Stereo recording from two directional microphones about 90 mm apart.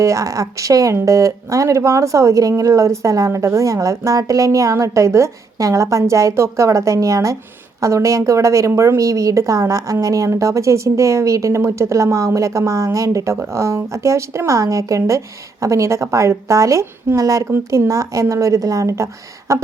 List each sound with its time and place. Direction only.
0.0 s a woman's voice: 35° right (ahead or behind)